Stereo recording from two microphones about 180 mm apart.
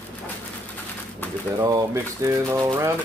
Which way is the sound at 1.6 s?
20° right (ahead or behind).